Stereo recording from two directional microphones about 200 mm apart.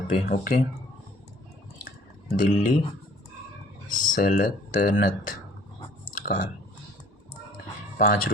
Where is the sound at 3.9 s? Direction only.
40° left (ahead or behind).